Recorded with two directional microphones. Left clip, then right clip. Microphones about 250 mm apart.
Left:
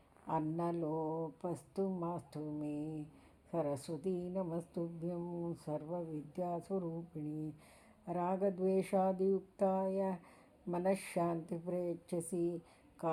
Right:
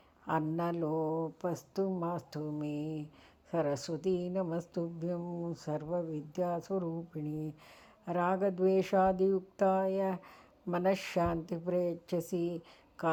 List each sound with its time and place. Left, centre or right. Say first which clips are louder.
0.3 s a woman's voice: right 4 dB; right